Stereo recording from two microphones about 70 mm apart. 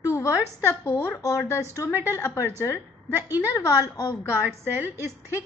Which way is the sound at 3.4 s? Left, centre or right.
Left.